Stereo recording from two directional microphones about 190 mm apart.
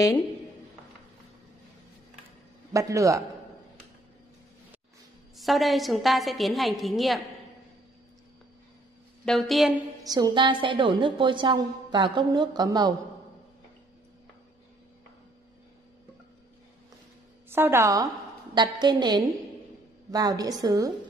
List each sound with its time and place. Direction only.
2.7 s a man's voice: 15° right (ahead or behind)
5.4 s a woman's voice: centre (ahead or behind)
9.2 s a woman's voice: centre (ahead or behind)
10.0 s a woman's voice: 20° right (ahead or behind)
17.5 s a woman's voice: 10° right (ahead or behind)